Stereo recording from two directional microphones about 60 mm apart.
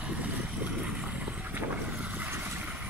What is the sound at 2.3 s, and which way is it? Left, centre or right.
Vehicle, right.